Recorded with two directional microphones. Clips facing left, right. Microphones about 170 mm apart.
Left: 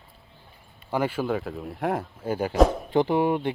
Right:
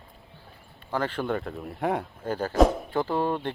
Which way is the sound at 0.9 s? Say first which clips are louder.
Left 2 dB; 10° left (ahead or behind).